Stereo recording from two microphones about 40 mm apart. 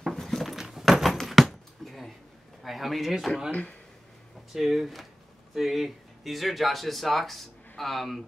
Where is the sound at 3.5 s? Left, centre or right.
Left.